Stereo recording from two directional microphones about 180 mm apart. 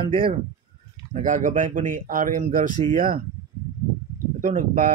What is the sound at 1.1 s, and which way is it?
Speech, 45° right (ahead or behind).